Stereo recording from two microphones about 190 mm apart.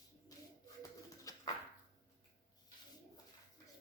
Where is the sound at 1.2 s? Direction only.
20° left (ahead or behind).